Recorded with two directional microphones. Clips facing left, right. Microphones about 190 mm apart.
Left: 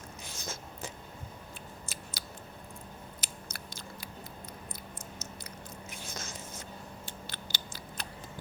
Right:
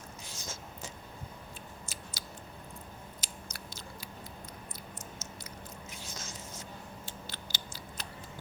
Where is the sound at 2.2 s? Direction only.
55° left (ahead or behind).